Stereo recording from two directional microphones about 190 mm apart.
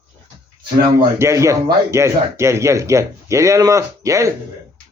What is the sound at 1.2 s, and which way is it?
Speech, 15° right (ahead or behind).